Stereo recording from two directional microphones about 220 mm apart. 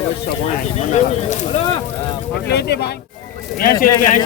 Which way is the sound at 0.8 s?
30° left (ahead or behind).